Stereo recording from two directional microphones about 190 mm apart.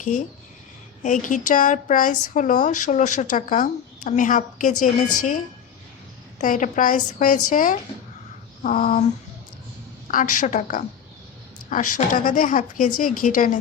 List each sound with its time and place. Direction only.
1.0 s speech: 40° left (ahead or behind)
6.4 s speech: 45° left (ahead or behind)